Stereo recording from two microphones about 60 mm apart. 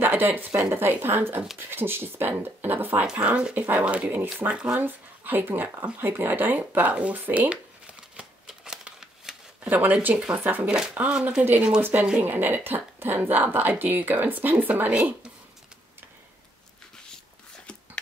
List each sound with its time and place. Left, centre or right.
0.0 s speech: right
4.5 s speech: centre
4.7 s speech: right
8.5 s shuffling cards: centre
9.7 s speech: right
10.7 s speech: centre
11.8 s speech: right